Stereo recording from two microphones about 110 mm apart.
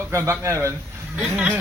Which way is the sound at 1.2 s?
10° right (ahead or behind).